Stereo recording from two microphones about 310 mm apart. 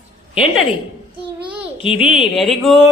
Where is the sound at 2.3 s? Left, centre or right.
Centre.